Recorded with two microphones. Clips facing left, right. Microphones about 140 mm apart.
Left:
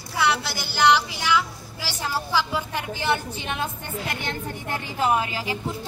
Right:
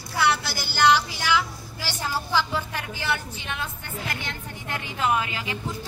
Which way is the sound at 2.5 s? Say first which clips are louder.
Left 2 dB; 20° left (ahead or behind).